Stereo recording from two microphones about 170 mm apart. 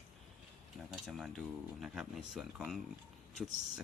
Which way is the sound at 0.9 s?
Centre (ahead or behind).